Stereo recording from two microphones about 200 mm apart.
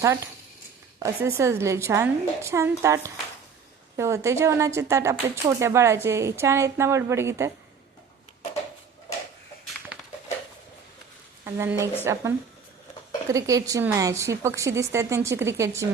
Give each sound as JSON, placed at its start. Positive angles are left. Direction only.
{"t": 0.0, "sound": "speech", "side_deg": -15}
{"t": 11.4, "sound": "speech", "side_deg": -10}
{"t": 13.2, "sound": "speech", "side_deg": -15}